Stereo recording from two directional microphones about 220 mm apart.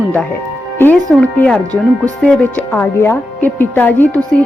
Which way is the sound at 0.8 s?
5° left (ahead or behind).